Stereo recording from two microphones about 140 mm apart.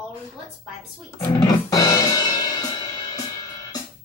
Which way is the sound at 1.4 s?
25° left (ahead or behind).